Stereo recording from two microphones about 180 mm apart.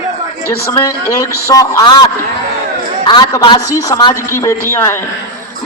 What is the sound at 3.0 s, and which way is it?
A man's voice, 25° left (ahead or behind).